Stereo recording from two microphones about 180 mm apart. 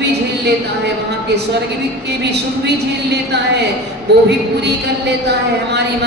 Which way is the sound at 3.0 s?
70° right (ahead or behind).